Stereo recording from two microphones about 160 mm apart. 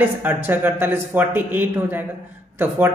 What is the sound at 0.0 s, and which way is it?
A woman's voice, 10° right (ahead or behind).